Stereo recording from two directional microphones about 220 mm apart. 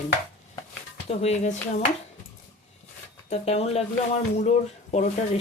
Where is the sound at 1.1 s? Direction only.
30° left (ahead or behind).